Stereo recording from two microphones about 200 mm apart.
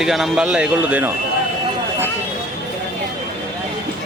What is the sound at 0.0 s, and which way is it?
Speech, centre (ahead or behind).